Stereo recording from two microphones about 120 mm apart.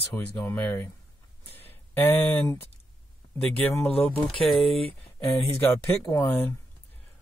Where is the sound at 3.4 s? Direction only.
10° left (ahead or behind).